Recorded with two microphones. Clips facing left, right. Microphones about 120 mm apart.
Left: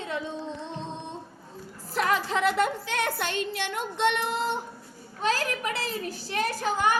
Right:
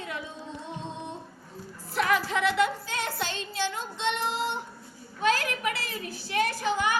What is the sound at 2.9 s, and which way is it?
Child singing, 55° left (ahead or behind).